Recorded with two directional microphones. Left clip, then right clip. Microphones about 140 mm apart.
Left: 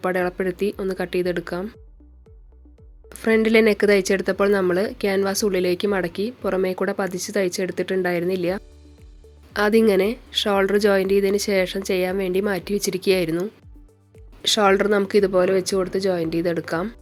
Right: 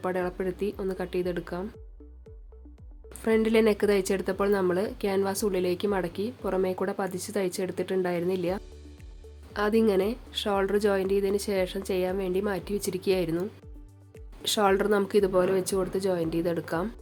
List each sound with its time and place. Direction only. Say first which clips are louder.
0.0 s speech: left 7 dB; 25° left (ahead or behind)
3.1 s speech: left 6 dB; 20° left (ahead or behind)